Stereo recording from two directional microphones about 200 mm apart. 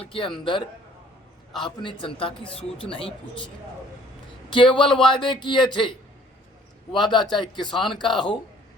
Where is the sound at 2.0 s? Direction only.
25° left (ahead or behind).